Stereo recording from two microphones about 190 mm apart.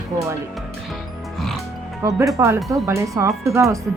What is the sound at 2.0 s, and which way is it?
Speech, 15° right (ahead or behind).